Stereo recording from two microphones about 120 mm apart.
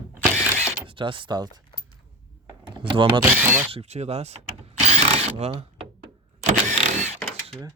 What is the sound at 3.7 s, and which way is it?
Speech, 60° right (ahead or behind).